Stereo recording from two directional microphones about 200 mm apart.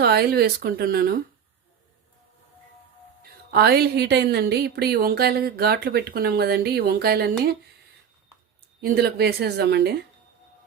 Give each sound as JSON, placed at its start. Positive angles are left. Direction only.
{"t": 0.0, "sound": "speech", "side_deg": -50}
{"t": 3.5, "sound": "speech", "side_deg": -50}
{"t": 8.8, "sound": "speech", "side_deg": -50}